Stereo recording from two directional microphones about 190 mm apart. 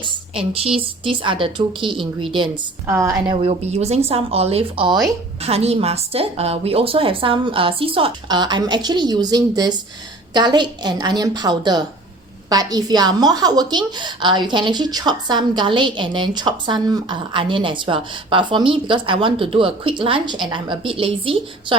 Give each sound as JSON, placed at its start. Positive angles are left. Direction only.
{"t": 0.0, "sound": "a woman's voice", "side_deg": -30}
{"t": 2.8, "sound": "a woman's voice", "side_deg": -10}
{"t": 3.3, "sound": "a woman's voice", "side_deg": -35}
{"t": 5.4, "sound": "a woman's voice", "side_deg": -30}